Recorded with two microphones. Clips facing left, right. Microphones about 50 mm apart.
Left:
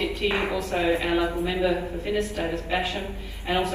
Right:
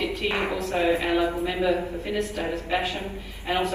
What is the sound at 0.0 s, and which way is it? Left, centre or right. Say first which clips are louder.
Music: left 1 dB; centre.